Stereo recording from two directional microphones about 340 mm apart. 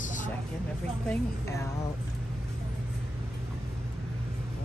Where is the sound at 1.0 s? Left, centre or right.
Centre.